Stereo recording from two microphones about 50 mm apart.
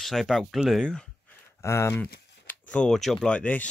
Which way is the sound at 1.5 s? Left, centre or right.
Left.